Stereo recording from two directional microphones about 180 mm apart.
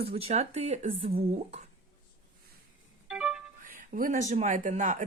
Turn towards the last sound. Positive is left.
turn(degrees=-45)  # may be behind; listen again after turning